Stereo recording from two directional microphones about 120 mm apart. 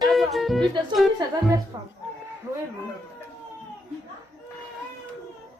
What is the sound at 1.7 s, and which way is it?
Music, 30° right (ahead or behind).